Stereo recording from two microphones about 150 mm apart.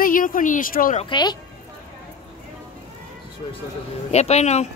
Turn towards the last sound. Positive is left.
turn(degrees=50)  # may be behind; listen again after turning